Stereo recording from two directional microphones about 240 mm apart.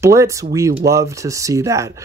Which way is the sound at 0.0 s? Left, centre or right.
Centre.